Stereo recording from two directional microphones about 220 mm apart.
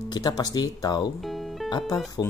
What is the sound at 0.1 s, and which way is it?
Speech, 15° left (ahead or behind).